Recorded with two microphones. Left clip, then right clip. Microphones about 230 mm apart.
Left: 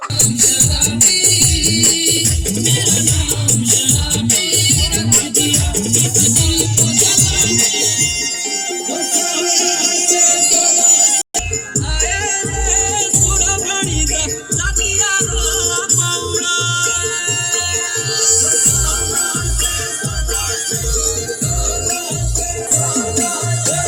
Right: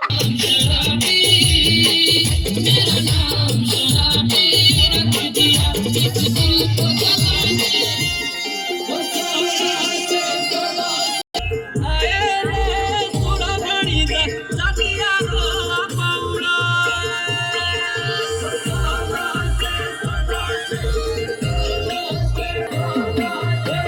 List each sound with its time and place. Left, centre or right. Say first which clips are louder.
0.2 s music: left 3 dB; left
4.0 s music: right 3 dB; left
9.1 s music: left 3 dB; left
16.5 s music: even; left